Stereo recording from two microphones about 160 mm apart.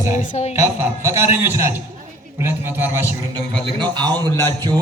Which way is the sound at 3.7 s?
25° right (ahead or behind).